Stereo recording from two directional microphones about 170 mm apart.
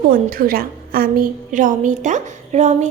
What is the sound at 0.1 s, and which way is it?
A woman's voice, 55° right (ahead or behind).